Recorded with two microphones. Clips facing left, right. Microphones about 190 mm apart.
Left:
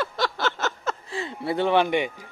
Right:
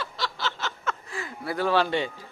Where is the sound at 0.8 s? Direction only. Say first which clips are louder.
Left 3 dB; 35° left (ahead or behind); by 2.3 s 15° left (ahead or behind).